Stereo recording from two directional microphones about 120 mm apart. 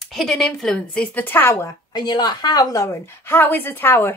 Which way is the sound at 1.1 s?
15° left (ahead or behind).